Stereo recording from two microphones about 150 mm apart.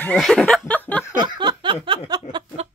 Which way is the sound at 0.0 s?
5° left (ahead or behind).